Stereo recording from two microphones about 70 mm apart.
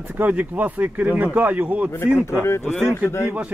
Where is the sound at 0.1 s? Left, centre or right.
Right.